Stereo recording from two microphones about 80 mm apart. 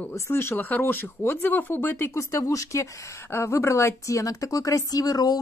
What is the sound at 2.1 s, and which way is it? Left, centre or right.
Speech, left.